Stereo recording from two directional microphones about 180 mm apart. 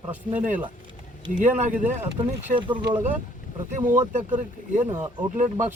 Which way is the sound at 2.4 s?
30° right (ahead or behind).